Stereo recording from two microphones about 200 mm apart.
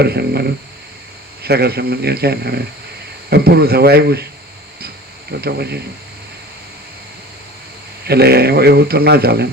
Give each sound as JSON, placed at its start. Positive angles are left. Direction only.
{"t": 0.0, "sound": "speech", "side_deg": -55}
{"t": 5.4, "sound": "speech", "side_deg": -55}
{"t": 8.0, "sound": "speech", "side_deg": -50}